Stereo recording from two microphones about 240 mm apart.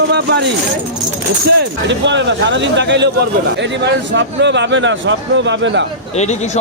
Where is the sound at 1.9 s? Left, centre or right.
Right.